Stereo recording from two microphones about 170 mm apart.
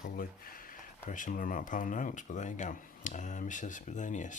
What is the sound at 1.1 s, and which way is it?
Speech, 50° left (ahead or behind).